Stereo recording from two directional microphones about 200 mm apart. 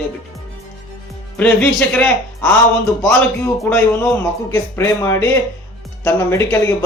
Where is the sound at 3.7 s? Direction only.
10° left (ahead or behind).